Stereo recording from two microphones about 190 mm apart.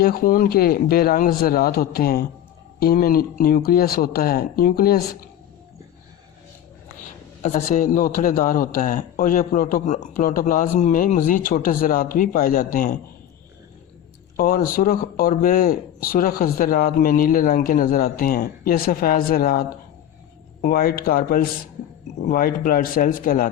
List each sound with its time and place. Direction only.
0.0 s a man's voice: 50° left (ahead or behind)
7.4 s a man's voice: 40° left (ahead or behind)
14.3 s a man's voice: 50° left (ahead or behind)